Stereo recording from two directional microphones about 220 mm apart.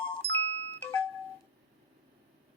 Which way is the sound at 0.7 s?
10° left (ahead or behind).